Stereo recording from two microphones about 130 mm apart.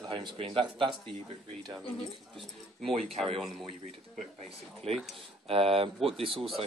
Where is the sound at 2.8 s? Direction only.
50° right (ahead or behind).